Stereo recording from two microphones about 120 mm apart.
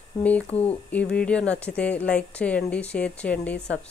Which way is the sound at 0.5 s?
60° left (ahead or behind).